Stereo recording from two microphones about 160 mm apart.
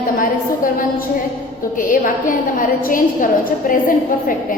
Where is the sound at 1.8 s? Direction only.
55° left (ahead or behind).